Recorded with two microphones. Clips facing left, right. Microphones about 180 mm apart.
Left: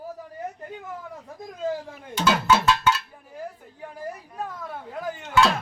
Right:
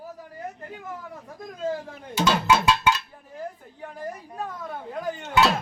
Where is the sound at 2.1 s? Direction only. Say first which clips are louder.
Even; 10° right (ahead or behind).